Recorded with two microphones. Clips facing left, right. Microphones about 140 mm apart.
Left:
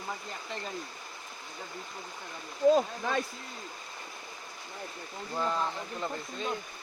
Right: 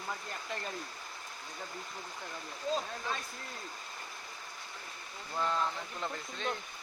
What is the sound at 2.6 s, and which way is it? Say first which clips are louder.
Speech: left 11 dB; 65° left (ahead or behind).